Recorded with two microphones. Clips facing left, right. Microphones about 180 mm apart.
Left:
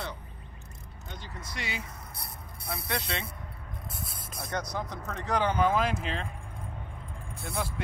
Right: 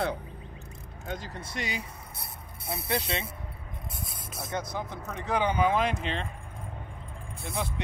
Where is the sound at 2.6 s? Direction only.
30° right (ahead or behind).